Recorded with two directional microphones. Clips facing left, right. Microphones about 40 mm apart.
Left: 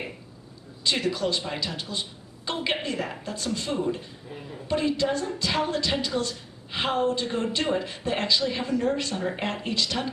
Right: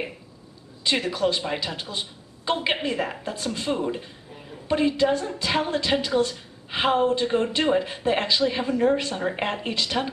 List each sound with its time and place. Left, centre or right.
0.8 s a woman's voice: right